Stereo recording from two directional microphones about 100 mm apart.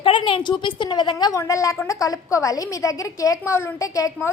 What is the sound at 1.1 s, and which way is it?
A woman's voice, 35° left (ahead or behind).